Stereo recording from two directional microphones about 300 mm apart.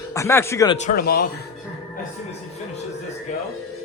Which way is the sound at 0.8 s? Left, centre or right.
Left.